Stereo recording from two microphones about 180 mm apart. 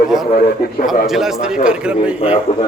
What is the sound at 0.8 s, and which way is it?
A man's voice, centre (ahead or behind).